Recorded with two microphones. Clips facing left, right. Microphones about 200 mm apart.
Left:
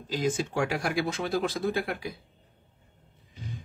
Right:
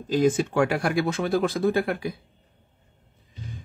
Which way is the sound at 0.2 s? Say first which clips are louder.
Right 7 dB; 55° right (ahead or behind).